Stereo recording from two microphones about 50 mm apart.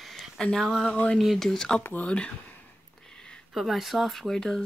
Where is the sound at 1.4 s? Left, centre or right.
Centre.